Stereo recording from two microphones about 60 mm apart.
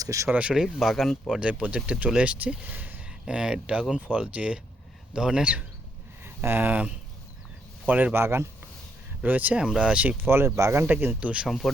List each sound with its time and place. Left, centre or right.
0.0 s speech: right
0.3 s speech: right
0.5 s speech: centre
1.3 s speech: centre
3.2 s speech: centre
6.2 s speech: right
8.1 s speech: right
9.2 s speech: right
9.6 s speech: centre
10.2 s speech: right
10.8 s speech: right
11.4 s speech: centre